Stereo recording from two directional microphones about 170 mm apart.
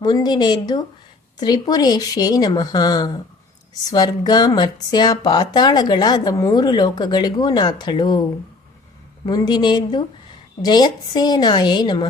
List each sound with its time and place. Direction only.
0.0 s speech: 25° left (ahead or behind)
9.2 s speech: 25° left (ahead or behind)